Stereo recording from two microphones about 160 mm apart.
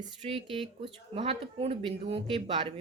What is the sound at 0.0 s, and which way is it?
Speech, 40° right (ahead or behind).